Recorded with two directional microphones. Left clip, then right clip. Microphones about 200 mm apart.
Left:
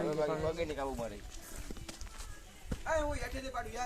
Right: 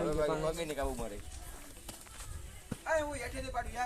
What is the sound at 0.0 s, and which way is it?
Bird, 30° right (ahead or behind).